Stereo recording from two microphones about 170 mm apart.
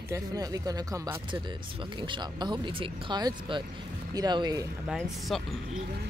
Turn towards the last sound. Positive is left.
turn(degrees=0)  # may be behind; listen again after turning